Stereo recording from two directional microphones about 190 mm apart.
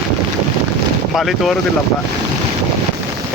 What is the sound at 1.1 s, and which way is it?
Speech, centre (ahead or behind).